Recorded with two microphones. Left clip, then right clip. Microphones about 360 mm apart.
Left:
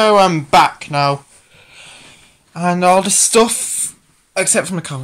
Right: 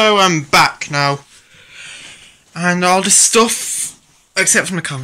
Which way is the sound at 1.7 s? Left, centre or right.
Centre.